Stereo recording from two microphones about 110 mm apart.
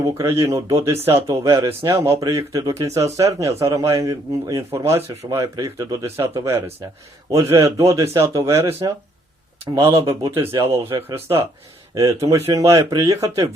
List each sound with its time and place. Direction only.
0.2 s a man's voice: 25° right (ahead or behind)
0.8 s speech: 65° right (ahead or behind)
1.3 s a man's voice: 25° right (ahead or behind)
9.9 s a man's voice: 30° right (ahead or behind)